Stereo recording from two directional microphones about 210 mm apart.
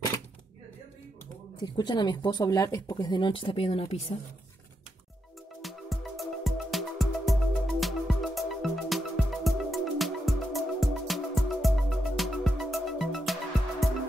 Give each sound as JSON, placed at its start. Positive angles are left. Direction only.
{"t": 1.6, "sound": "speech", "side_deg": 20}
{"t": 5.6, "sound": "music", "side_deg": 0}